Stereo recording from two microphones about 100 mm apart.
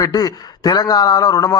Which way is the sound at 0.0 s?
40° left (ahead or behind).